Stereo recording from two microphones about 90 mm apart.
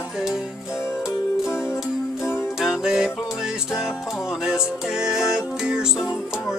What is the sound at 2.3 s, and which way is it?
Music, 5° right (ahead or behind).